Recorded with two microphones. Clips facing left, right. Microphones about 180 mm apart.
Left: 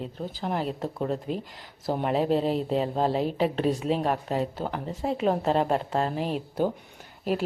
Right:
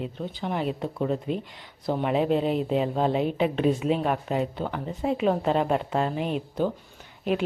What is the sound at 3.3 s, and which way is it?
Speech, 35° left (ahead or behind).